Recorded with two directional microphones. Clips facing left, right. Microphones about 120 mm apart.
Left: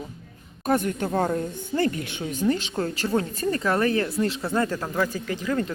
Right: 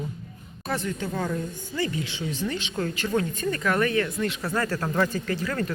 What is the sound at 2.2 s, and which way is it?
Speech, 40° left (ahead or behind).